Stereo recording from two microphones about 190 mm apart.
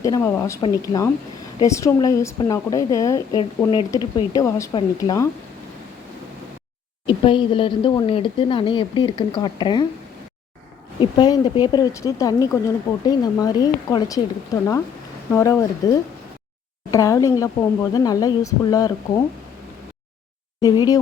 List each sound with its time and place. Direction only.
0.0 s speech: 15° left (ahead or behind)
7.1 s speech: 25° left (ahead or behind)
11.0 s speech: 20° left (ahead or behind)
20.6 s speech: 20° left (ahead or behind)